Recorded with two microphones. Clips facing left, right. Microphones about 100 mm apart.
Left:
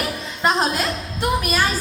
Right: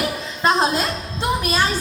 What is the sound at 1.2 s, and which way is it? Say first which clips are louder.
Speech: even; 20° right (ahead or behind).